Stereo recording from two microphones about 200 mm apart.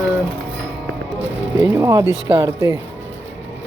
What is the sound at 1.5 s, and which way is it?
Speech, 10° right (ahead or behind).